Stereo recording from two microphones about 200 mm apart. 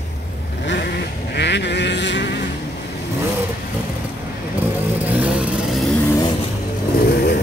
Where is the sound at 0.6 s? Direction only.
60° left (ahead or behind).